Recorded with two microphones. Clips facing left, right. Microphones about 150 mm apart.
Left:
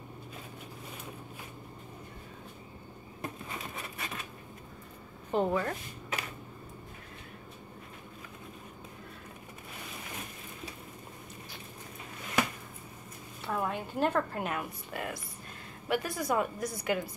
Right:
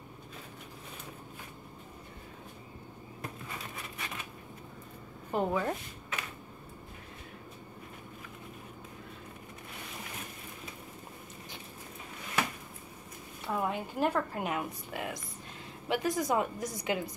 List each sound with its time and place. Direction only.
5.3 s a woman's voice: 5° right (ahead or behind)
13.5 s a woman's voice: 10° right (ahead or behind)